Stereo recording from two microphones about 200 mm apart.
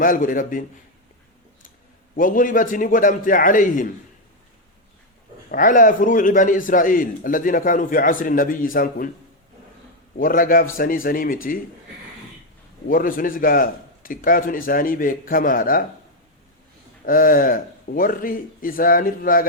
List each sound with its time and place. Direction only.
0.0 s a man's voice: 45° left (ahead or behind)
2.1 s a man's voice: 45° left (ahead or behind)
5.5 s a man's voice: 40° left (ahead or behind)
10.2 s a man's voice: 45° left (ahead or behind)
12.9 s a man's voice: 45° left (ahead or behind)
17.1 s a man's voice: 45° left (ahead or behind)